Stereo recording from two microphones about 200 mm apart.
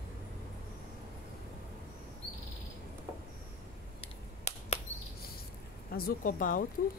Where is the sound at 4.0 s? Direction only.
35° left (ahead or behind).